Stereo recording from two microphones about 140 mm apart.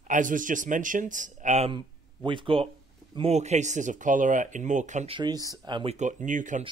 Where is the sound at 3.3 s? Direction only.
55° right (ahead or behind).